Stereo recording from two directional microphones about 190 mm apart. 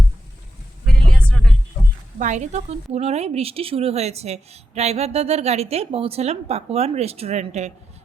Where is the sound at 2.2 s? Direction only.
40° right (ahead or behind).